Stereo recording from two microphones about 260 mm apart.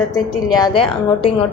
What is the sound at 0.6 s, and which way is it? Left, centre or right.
Speech, centre.